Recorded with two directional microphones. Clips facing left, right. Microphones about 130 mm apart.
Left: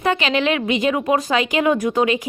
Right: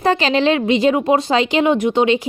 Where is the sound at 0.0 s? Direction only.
35° right (ahead or behind).